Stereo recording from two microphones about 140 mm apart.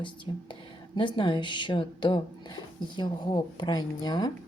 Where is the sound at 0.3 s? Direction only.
30° left (ahead or behind).